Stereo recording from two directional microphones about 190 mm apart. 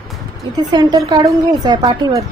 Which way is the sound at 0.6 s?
20° right (ahead or behind).